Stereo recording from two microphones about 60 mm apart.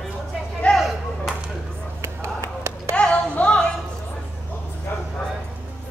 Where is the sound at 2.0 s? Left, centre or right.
Right.